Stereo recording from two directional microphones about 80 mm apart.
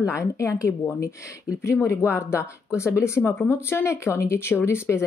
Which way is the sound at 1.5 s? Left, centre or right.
Centre.